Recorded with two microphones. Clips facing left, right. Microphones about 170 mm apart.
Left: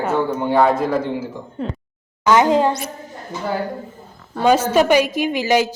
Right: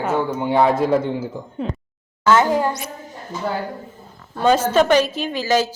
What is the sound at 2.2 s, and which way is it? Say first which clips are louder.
Speech: left 2 dB; 15° left (ahead or behind).